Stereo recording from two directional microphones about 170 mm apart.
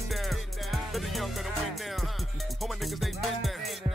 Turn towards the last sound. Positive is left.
turn(degrees=0)  # may be behind; listen again after turning